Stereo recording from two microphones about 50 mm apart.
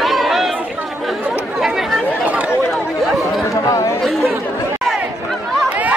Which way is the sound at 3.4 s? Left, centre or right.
Left.